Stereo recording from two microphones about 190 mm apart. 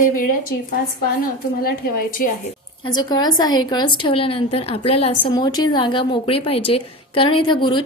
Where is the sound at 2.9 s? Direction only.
20° left (ahead or behind).